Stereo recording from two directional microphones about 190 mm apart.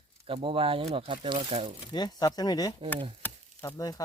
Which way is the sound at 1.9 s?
20° left (ahead or behind).